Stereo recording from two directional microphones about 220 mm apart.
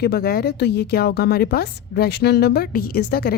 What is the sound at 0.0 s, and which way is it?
A woman's voice, 45° left (ahead or behind).